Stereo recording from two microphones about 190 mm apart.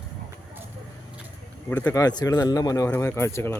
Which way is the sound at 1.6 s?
10° left (ahead or behind).